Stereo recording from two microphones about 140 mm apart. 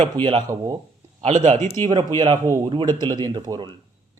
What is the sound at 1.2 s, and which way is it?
Speech, 55° right (ahead or behind).